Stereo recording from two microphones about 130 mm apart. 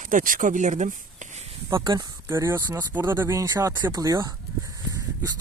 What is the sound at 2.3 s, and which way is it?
Speech, 20° right (ahead or behind).